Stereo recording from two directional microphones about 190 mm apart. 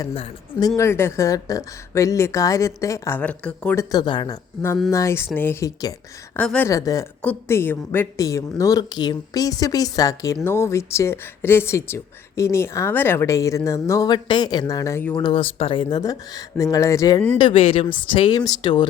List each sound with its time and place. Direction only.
0.1 s speech: 30° left (ahead or behind)
0.8 s speech: 15° left (ahead or behind)
3.9 s speech: 25° left (ahead or behind); by 6.7 s 5° left (ahead or behind)
6.7 s speech: 15° left (ahead or behind)